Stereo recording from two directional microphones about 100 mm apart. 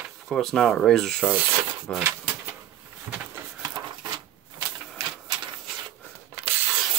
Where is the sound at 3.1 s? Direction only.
20° right (ahead or behind).